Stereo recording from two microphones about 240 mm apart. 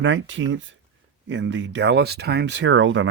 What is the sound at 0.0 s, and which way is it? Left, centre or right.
Speech, right.